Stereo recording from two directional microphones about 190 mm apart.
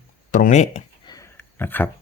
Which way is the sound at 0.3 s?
40° left (ahead or behind).